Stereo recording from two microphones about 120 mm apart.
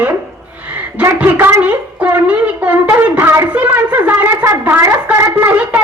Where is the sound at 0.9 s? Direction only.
15° right (ahead or behind).